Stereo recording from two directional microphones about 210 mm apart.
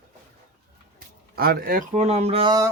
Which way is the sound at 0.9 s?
45° right (ahead or behind).